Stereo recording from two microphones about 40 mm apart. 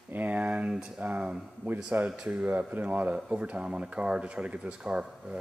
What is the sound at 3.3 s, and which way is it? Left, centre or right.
Speech, right.